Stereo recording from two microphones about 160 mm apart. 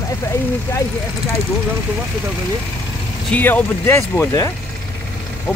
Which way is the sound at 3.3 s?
10° left (ahead or behind).